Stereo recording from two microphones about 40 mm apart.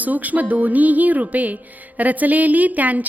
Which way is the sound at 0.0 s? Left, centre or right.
Right.